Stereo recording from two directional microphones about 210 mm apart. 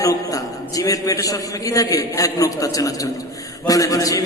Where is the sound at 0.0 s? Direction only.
15° left (ahead or behind).